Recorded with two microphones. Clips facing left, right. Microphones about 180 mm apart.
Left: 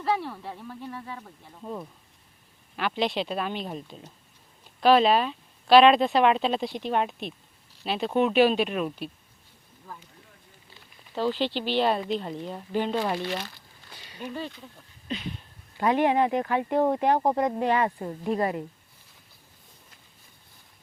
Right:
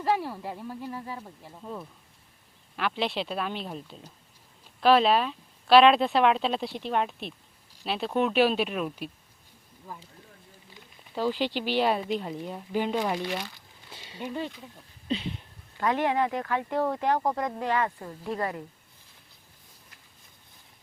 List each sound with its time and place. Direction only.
0.0 s a woman's voice: 10° right (ahead or behind)
1.6 s speech: 10° left (ahead or behind)
2.7 s speech: centre (ahead or behind)
11.1 s a woman's voice: 10° right (ahead or behind)
14.1 s a woman's voice: 20° right (ahead or behind)
15.0 s a sound: 30° right (ahead or behind)
15.8 s speech: 20° left (ahead or behind)